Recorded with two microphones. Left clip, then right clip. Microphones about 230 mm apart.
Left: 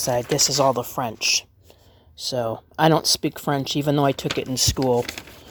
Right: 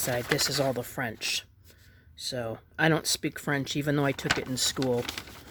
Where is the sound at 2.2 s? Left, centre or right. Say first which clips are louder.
Left 9 dB; centre.